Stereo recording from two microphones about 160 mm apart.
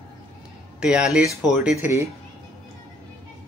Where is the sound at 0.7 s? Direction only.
5° right (ahead or behind).